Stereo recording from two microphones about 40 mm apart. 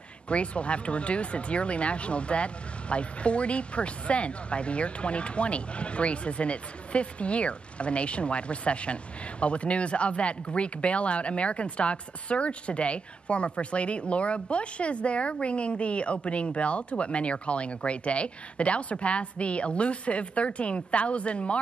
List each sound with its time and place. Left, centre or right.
0.3 s speech: left